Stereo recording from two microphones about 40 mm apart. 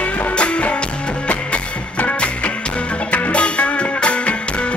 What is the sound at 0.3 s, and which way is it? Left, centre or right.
Music, left.